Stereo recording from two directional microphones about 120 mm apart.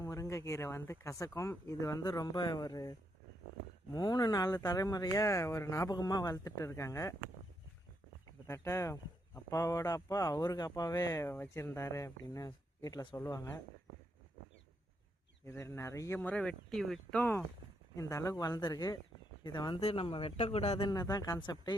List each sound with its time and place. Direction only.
0.0 s speech: 25° left (ahead or behind)
3.9 s speech: 35° left (ahead or behind)
8.4 s speech: 20° left (ahead or behind)
15.4 s speech: 25° left (ahead or behind)
16.2 s speech: 10° left (ahead or behind)
17.2 s speech: 15° left (ahead or behind); by 19.8 s 40° left (ahead or behind)
19.8 s speech: 55° left (ahead or behind)
20.3 s speech: 65° left (ahead or behind)
20.9 s speech: 30° left (ahead or behind)